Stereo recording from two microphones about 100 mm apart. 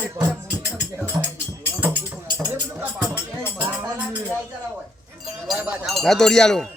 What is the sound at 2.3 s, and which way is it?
Music, 30° right (ahead or behind).